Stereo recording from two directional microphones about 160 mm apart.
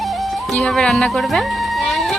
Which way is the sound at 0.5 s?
5° left (ahead or behind).